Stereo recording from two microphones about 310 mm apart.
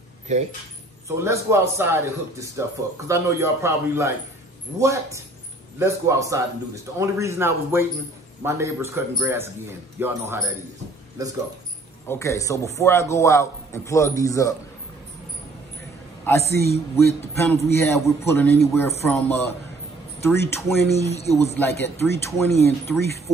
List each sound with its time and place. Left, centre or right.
0.3 s speech: right
1.0 s a man's voice: centre
12.1 s a man's voice: centre
16.3 s a man's voice: centre
20.9 s speech: centre
21.4 s a man's voice: centre